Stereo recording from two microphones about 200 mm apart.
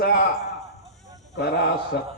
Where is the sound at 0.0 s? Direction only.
50° left (ahead or behind).